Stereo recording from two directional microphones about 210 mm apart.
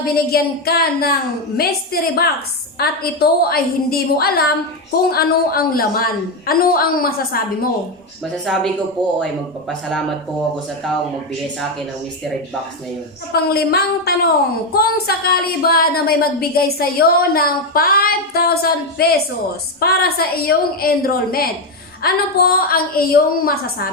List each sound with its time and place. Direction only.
0.0 s a woman's voice: 45° left (ahead or behind)
8.2 s speech: centre (ahead or behind)
13.3 s a woman's voice: 45° left (ahead or behind)